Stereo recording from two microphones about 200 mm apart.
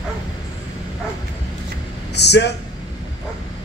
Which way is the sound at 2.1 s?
55° left (ahead or behind).